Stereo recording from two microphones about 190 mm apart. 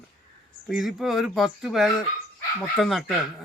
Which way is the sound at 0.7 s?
Centre (ahead or behind).